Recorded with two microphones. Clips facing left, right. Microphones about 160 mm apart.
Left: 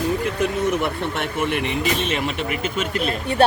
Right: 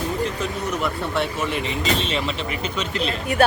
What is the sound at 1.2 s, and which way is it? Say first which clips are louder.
Speech: left 4 dB; 60° left (ahead or behind).